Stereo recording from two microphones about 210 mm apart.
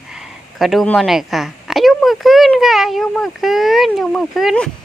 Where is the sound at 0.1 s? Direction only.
Centre (ahead or behind).